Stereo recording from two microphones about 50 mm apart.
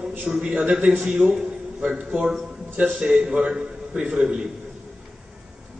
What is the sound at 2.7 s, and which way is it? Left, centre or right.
A man's voice, right.